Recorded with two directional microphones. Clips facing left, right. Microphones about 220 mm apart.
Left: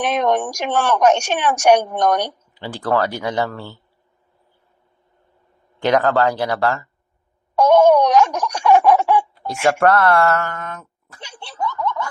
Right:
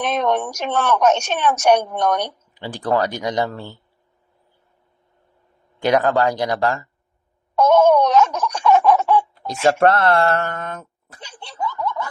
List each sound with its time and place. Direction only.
0.0 s speech: 10° left (ahead or behind)
2.6 s speech: 15° right (ahead or behind)
5.8 s speech: 15° right (ahead or behind)
7.5 s speech: 15° left (ahead or behind)
9.6 s speech: 25° right (ahead or behind)
11.4 s snicker: 15° right (ahead or behind)